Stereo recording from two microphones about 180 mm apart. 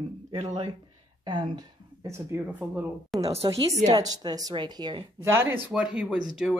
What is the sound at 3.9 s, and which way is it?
Speech, 20° right (ahead or behind).